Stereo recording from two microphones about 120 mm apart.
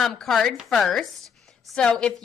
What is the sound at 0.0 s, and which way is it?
A woman's voice, centre (ahead or behind).